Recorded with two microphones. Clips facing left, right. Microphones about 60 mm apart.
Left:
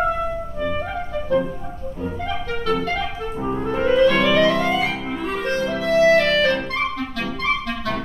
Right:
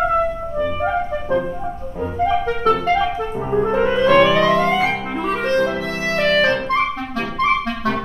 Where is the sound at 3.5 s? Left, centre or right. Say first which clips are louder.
Right 2 dB; right.